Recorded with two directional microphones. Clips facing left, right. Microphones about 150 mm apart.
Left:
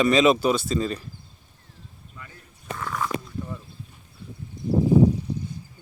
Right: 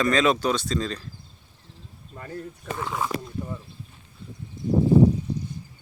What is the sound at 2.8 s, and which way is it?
Speech, 20° right (ahead or behind).